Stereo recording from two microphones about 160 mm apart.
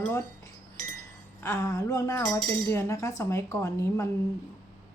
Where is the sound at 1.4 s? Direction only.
15° left (ahead or behind).